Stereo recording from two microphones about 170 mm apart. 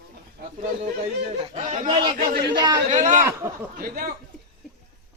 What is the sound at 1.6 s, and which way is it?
Speech, 45° right (ahead or behind).